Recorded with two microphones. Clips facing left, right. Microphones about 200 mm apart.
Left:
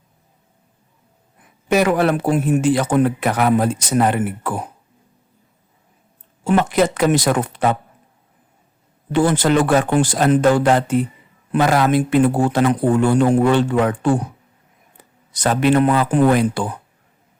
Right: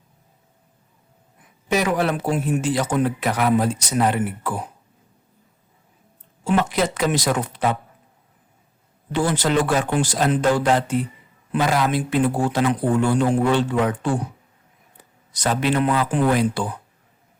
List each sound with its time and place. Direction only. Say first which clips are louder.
1.7 s speech: left 5 dB; 60° left (ahead or behind)
6.4 s speech: left 4 dB; 50° left (ahead or behind)
9.1 s speech: left 5 dB; 55° left (ahead or behind)
15.3 s speech: left 5 dB; 50° left (ahead or behind)